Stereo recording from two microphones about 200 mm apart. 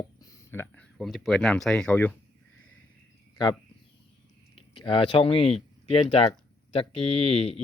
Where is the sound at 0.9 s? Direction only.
Centre (ahead or behind).